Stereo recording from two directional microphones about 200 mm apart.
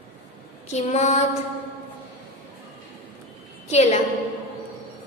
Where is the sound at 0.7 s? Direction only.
35° left (ahead or behind).